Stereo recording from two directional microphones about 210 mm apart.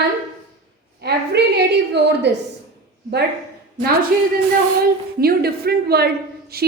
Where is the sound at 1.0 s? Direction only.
50° right (ahead or behind).